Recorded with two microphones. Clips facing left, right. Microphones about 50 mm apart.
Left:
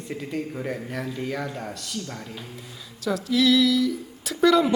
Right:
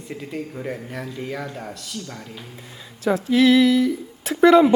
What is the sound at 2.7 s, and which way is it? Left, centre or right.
Speech, right.